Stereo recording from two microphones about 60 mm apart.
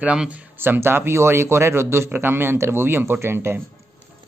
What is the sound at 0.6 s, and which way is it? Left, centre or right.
Speech, right.